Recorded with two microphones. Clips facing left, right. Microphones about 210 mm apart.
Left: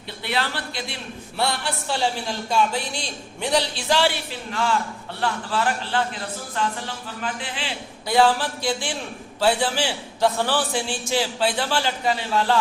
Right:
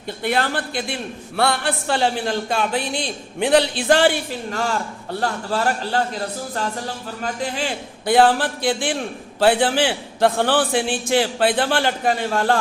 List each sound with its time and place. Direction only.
0.2 s a man's voice: 50° right (ahead or behind)